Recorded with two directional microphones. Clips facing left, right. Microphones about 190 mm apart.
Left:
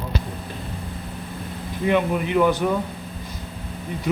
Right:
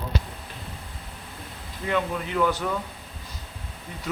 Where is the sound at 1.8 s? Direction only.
15° left (ahead or behind).